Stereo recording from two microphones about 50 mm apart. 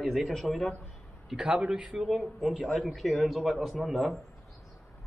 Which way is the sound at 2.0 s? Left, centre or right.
Centre.